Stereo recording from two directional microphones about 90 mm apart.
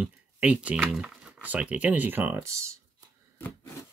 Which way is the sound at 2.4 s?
35° right (ahead or behind).